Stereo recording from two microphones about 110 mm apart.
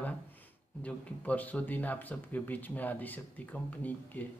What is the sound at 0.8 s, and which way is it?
A man's voice, 15° left (ahead or behind).